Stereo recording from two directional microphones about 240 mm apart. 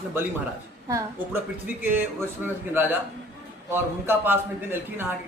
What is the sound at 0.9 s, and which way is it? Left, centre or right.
Speech, centre.